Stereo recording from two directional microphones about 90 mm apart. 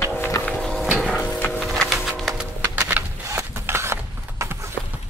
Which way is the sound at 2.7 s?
15° right (ahead or behind).